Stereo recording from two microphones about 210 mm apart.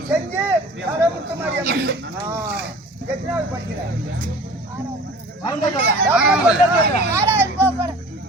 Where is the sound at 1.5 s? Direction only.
50° right (ahead or behind).